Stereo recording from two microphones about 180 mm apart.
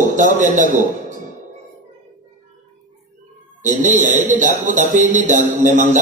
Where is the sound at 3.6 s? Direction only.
45° right (ahead or behind).